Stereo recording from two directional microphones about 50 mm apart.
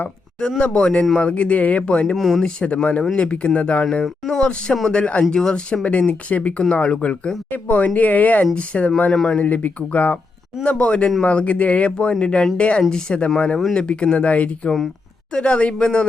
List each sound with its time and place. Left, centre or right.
0.6 s speech: left
2.1 s speech: centre
2.4 s speech: left
4.0 s speech: centre
4.9 s speech: left
5.8 s speech: left
9.1 s speech: centre
9.4 s speech: left
10.6 s speech: left